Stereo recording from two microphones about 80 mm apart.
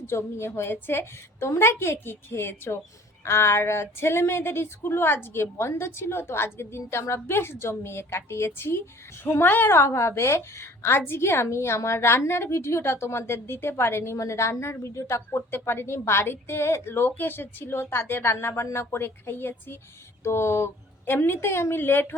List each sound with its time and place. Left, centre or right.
0.0 s a woman's voice: left